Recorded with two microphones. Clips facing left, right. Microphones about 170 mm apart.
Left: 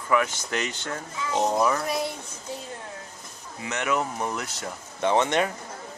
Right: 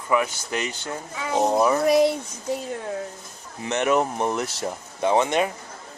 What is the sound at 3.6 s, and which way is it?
Speech, 30° right (ahead or behind).